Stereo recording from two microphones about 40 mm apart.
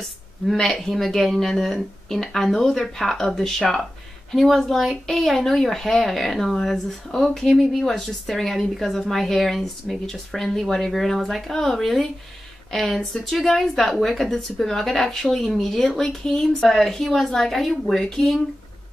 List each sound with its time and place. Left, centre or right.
0.6 s a woman's voice: centre